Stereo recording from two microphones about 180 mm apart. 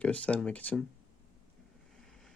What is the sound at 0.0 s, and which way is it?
Speech, 5° left (ahead or behind).